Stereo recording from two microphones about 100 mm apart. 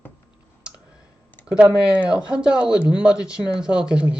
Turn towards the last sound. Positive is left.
turn(degrees=-10)  # may be behind; listen again after turning